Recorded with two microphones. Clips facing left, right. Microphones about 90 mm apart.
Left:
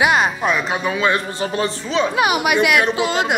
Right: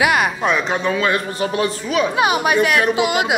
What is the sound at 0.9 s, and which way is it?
A man's voice, 25° left (ahead or behind).